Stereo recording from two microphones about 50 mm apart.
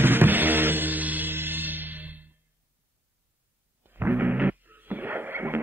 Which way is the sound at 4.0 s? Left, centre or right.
Right.